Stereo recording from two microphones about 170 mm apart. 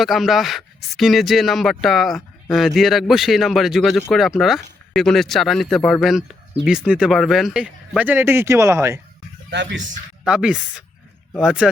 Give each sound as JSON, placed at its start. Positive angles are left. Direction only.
{"t": 0.0, "sound": "speech", "side_deg": 0}
{"t": 9.5, "sound": "speech", "side_deg": -90}
{"t": 10.2, "sound": "speech", "side_deg": -5}